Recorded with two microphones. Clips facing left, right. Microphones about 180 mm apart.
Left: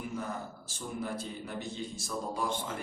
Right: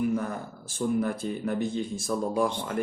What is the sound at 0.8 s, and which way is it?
Speech, 55° right (ahead or behind).